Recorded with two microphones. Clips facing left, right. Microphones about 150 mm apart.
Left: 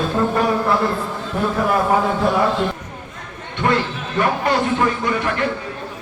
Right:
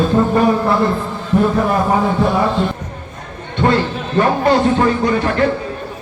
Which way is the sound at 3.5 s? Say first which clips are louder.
Right 4 dB; 30° right (ahead or behind).